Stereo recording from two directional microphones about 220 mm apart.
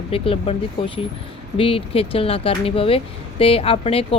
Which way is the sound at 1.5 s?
25° left (ahead or behind).